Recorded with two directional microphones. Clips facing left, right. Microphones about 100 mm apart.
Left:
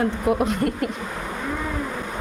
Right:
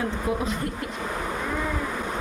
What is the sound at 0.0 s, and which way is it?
Speech, 65° left (ahead or behind).